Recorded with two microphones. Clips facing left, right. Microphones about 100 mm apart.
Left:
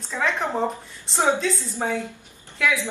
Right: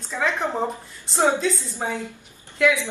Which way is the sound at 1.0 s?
Centre (ahead or behind).